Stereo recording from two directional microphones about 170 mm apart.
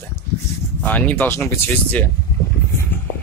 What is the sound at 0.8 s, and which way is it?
Speech, 10° left (ahead or behind).